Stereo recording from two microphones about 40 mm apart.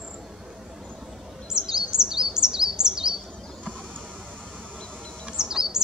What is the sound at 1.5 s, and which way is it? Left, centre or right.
Bird, centre.